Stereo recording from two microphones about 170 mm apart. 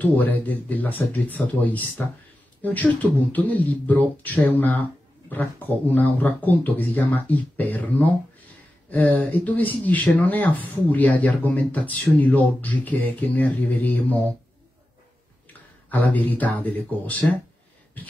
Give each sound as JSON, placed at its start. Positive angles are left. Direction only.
{"t": 0.0, "sound": "speech", "side_deg": 10}
{"t": 15.9, "sound": "speech", "side_deg": 10}